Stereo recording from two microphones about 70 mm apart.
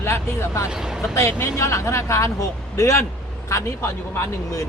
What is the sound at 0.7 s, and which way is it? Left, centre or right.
Speech, centre.